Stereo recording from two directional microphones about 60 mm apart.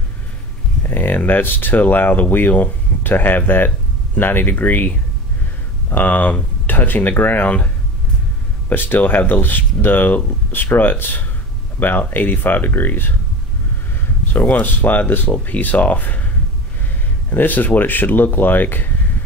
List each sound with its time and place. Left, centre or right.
0.8 s speech: left
14.3 s speech: left
17.3 s speech: left